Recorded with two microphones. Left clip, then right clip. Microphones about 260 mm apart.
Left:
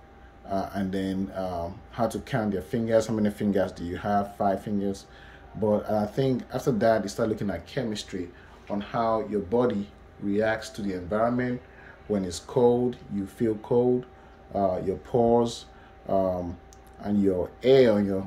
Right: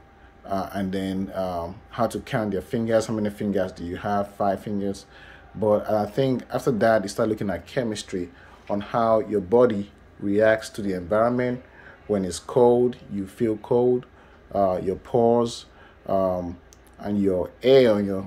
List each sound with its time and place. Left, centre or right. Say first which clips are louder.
0.5 s speech: right 2 dB; centre